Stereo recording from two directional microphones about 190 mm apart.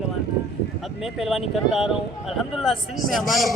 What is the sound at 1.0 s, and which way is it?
Speech, centre (ahead or behind).